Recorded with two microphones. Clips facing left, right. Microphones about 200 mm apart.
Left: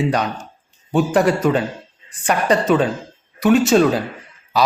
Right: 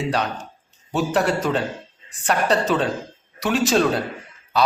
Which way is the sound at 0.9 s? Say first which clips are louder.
Left 5 dB; 5° left (ahead or behind).